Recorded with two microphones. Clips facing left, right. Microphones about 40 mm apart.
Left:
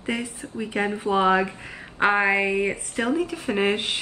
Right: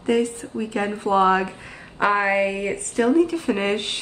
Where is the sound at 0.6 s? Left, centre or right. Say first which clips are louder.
Right 1 dB; centre; by 2.7 s left.